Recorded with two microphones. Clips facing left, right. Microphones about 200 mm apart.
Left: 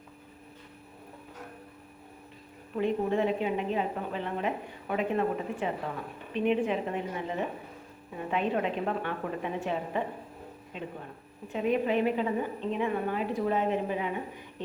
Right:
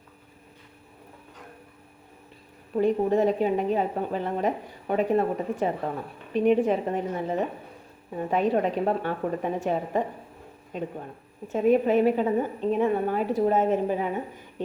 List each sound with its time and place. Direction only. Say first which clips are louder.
2.7 s a woman's voice: right 5 dB; 40° right (ahead or behind)